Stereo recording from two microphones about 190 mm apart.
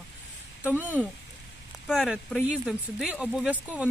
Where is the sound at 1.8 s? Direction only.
Centre (ahead or behind).